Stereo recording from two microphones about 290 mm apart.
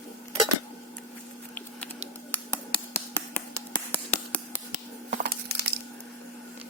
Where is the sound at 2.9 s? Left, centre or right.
Centre.